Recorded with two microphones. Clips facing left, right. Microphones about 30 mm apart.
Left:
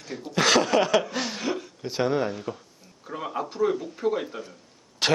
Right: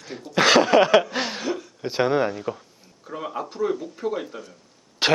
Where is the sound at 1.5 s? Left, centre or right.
Centre.